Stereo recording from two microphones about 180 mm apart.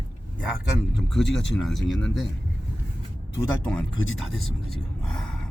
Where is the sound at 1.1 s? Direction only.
Centre (ahead or behind).